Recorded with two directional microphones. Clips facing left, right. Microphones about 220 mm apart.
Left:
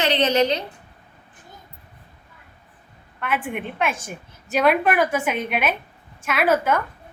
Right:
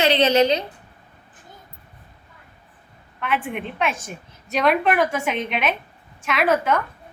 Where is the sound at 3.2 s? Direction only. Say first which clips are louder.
Right 1 dB; centre (ahead or behind).